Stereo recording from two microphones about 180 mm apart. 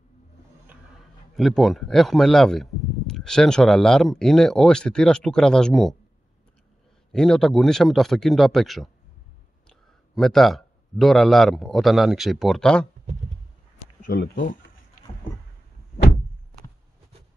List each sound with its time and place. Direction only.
1.3 s speech: centre (ahead or behind)
7.1 s a man's voice: 5° left (ahead or behind)
14.0 s speech: 55° left (ahead or behind)